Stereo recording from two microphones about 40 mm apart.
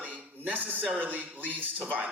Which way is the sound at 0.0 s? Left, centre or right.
Right.